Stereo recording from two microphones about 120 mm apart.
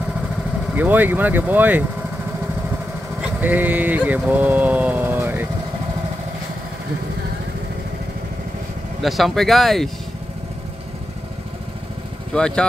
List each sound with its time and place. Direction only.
0.7 s speech: 15° right (ahead or behind)
3.2 s speech: 15° right (ahead or behind)
4.3 s vehicle: 15° right (ahead or behind)
9.0 s speech: centre (ahead or behind)
12.4 s speech: 5° left (ahead or behind)